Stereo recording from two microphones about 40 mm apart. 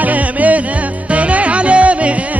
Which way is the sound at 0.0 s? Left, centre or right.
Right.